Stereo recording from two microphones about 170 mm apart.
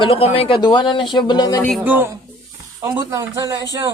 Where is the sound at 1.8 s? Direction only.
10° right (ahead or behind).